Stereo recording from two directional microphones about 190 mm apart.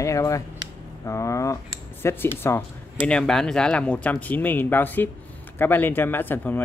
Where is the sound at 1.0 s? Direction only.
15° left (ahead or behind).